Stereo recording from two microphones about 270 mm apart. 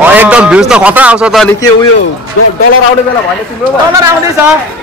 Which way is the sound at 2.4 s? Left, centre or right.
Left.